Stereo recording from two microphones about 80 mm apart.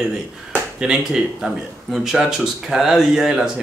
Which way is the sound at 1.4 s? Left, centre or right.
Centre.